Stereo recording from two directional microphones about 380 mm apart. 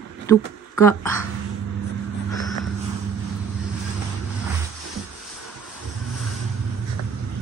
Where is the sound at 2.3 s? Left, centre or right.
Centre.